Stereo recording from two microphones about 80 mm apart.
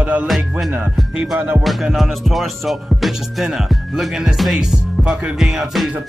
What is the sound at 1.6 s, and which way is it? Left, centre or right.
Music, centre.